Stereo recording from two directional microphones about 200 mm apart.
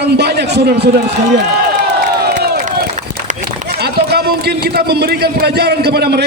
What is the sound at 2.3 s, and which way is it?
Crowd, 45° right (ahead or behind).